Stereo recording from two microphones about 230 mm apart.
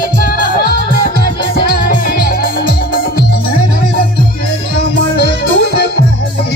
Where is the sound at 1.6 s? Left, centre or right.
Left.